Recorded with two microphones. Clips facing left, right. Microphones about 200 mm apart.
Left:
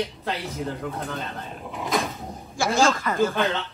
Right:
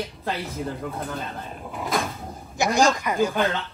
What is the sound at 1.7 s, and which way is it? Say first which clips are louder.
Cupboard open or close: left 1 dB; centre (ahead or behind).